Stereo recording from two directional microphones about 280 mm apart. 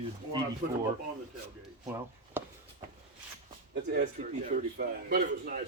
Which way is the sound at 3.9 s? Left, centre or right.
Right.